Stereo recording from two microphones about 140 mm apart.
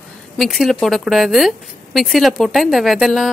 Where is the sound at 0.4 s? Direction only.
Centre (ahead or behind).